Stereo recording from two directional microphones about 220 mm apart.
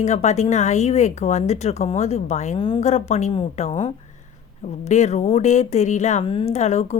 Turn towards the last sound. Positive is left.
turn(degrees=30)  # may be behind; listen again after turning